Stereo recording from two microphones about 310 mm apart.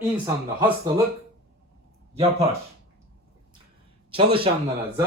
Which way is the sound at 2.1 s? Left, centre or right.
Centre.